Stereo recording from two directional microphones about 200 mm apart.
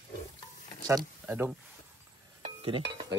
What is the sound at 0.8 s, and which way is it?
Speech, 10° right (ahead or behind).